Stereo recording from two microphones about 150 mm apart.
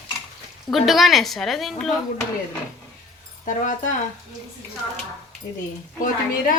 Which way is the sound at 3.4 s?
60° left (ahead or behind).